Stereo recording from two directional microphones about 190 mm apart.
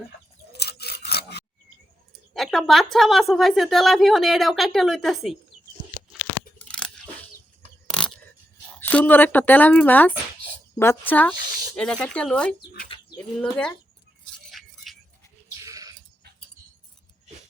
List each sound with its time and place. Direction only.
0.5 s a sound: 60° left (ahead or behind)
2.3 s a woman's voice: centre (ahead or behind)
6.7 s chewing: 5° left (ahead or behind)
7.9 s a sound: 5° left (ahead or behind)
8.8 s a woman's voice: 10° left (ahead or behind)
15.6 s sheep: 20° right (ahead or behind)